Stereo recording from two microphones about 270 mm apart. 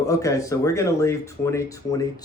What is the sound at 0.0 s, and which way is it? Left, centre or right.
Speech, centre.